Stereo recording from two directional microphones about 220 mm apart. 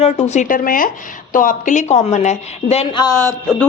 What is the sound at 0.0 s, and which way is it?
A woman's voice, 30° left (ahead or behind).